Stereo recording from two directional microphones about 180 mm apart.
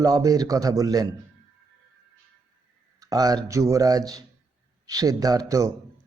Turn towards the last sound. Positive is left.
turn(degrees=-20)  # may be behind; listen again after turning